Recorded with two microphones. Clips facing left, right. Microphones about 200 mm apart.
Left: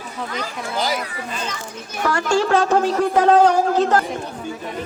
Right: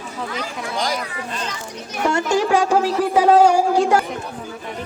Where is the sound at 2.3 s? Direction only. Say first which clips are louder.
Left 1 dB; 15° right (ahead or behind).